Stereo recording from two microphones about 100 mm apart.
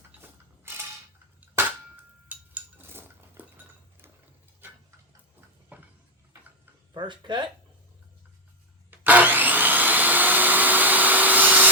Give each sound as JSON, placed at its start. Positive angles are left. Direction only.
{"t": 0.2, "sound": "mechanisms", "side_deg": -20}
{"t": 2.3, "sound": "cutlery", "side_deg": -20}
{"t": 5.7, "sound": "a sound", "side_deg": -15}
{"t": 6.9, "sound": "speech", "side_deg": -50}
{"t": 8.9, "sound": "vacuum cleaner", "side_deg": -15}